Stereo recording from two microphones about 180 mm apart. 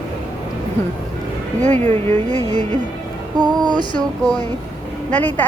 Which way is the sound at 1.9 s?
10° left (ahead or behind).